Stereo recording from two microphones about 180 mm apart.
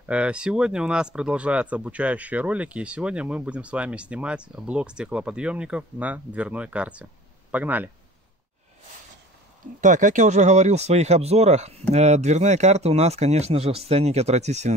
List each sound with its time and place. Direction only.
0.0 s speech: 5° right (ahead or behind)
9.8 s speech: 45° right (ahead or behind)